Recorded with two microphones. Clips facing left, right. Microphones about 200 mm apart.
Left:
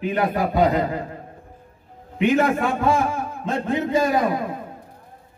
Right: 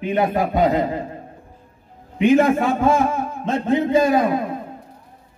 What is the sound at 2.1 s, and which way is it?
A man's voice, 20° right (ahead or behind).